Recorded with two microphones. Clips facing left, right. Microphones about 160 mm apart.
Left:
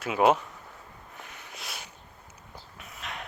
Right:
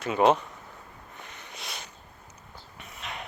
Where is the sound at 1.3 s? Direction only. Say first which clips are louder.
Right 1 dB; 5° left (ahead or behind).